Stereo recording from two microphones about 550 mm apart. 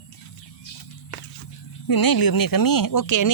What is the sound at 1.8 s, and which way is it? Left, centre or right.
Speech, left.